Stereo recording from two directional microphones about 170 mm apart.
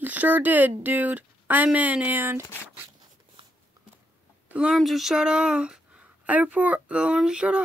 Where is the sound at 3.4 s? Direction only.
30° right (ahead or behind).